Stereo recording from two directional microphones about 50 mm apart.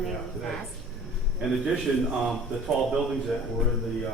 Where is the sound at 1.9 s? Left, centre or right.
Centre.